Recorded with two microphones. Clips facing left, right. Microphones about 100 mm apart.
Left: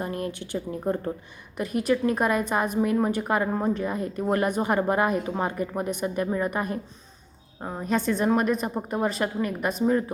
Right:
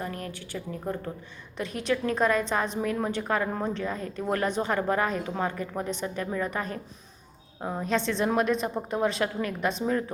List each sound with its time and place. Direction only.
0.0 s a woman's voice: 25° left (ahead or behind)
1.5 s a woman's voice: 5° left (ahead or behind)